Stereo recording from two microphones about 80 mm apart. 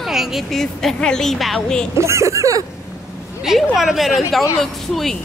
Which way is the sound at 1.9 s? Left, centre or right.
Right.